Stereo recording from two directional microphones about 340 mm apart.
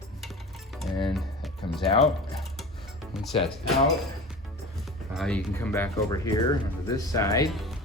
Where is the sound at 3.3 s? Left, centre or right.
Centre.